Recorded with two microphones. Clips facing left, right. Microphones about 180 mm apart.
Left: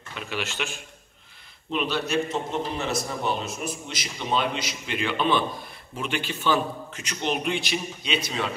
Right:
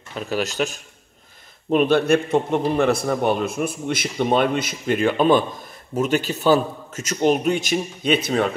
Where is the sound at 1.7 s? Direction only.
50° right (ahead or behind).